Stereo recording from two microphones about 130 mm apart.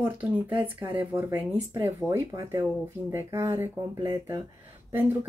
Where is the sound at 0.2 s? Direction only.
10° right (ahead or behind).